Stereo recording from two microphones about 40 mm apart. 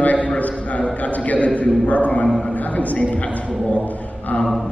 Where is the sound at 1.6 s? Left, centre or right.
Left.